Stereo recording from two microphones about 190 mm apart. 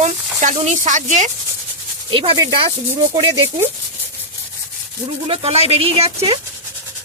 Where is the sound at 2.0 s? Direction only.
25° right (ahead or behind).